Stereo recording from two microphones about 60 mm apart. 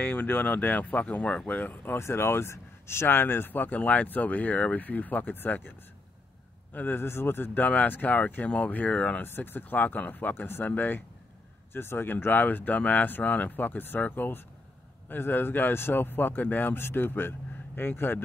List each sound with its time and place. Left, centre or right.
0.0 s speech: left
2.0 s speech: left
7.6 s speech: left
9.2 s speech: left
11.7 s speech: left